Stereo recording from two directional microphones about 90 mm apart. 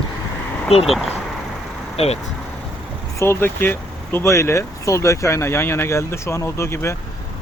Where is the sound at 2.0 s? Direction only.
90° left.